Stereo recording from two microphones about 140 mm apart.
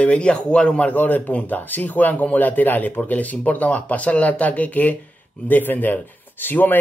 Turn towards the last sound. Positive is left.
turn(degrees=15)  # may be behind; listen again after turning